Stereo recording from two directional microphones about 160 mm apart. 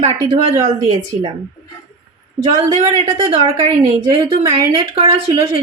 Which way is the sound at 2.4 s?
25° right (ahead or behind).